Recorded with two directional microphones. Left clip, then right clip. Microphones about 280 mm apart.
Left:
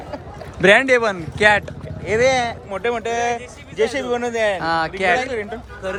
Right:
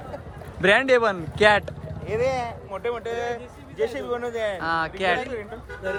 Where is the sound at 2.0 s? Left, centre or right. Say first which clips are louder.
Left 8 dB; left.